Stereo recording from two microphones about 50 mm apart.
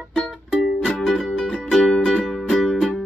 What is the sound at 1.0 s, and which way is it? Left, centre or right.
Music, centre.